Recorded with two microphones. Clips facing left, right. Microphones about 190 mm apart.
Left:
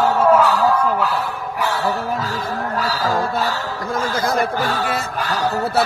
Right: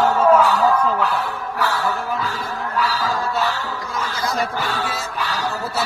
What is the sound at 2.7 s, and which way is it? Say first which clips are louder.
Speech: right 1 dB; 45° left (ahead or behind).